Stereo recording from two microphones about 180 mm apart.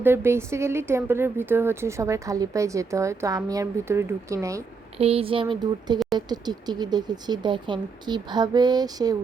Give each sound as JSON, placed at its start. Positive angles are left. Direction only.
{"t": 0.0, "sound": "a woman's voice", "side_deg": -10}
{"t": 4.9, "sound": "speech", "side_deg": -35}